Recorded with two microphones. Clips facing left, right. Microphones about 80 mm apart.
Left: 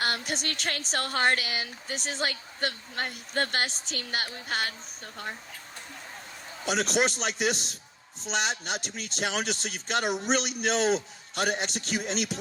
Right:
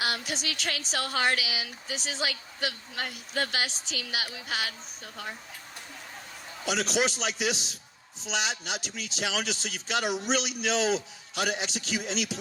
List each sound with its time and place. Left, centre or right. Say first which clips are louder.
0.0 s a woman's voice: left 1 dB; left
6.7 s a woman's voice: left 1 dB; left